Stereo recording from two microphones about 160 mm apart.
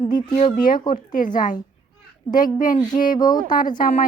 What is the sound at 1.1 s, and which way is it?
Speech, 55° left (ahead or behind).